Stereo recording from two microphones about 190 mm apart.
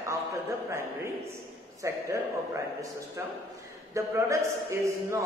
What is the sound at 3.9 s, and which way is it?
Speech, 15° right (ahead or behind).